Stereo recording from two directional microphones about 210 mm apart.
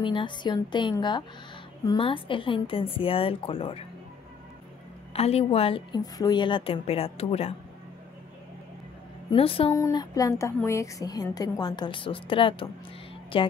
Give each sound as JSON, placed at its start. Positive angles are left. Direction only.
{"t": 0.0, "sound": "a woman's voice", "side_deg": 25}
{"t": 5.1, "sound": "a woman's voice", "side_deg": 30}
{"t": 9.3, "sound": "a woman's voice", "side_deg": 25}
{"t": 9.7, "sound": "a woman's voice", "side_deg": 15}